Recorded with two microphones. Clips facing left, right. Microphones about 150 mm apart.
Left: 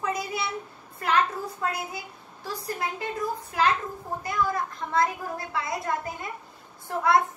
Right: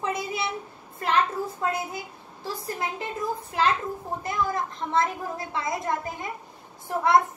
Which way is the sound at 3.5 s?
20° right (ahead or behind).